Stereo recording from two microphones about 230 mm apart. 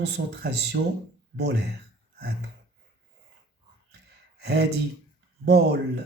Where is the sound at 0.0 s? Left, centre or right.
Right.